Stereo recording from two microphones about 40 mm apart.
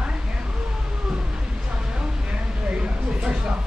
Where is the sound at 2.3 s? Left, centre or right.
Right.